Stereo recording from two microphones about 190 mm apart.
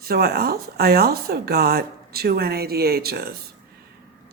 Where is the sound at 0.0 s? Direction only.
55° right (ahead or behind).